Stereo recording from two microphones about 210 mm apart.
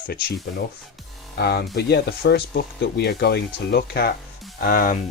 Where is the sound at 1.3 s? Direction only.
50° left (ahead or behind).